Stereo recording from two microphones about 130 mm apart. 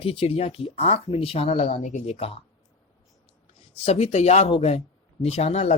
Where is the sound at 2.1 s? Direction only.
50° left (ahead or behind).